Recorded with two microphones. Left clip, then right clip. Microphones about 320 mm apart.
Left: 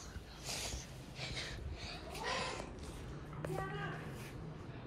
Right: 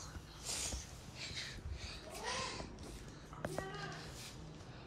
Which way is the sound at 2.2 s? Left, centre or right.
Centre.